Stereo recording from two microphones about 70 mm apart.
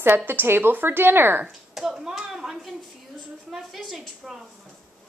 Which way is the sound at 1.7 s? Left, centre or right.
Centre.